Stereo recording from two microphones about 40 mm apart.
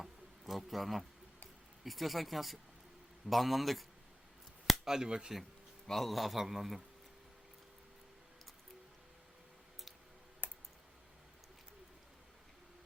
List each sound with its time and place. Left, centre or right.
0.0 s insect: centre
1.8 s a man's voice: centre
4.9 s speech: centre
5.9 s a man's voice: centre
10.4 s clicking: left